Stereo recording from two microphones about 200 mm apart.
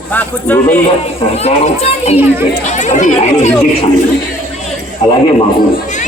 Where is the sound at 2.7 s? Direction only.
35° left (ahead or behind).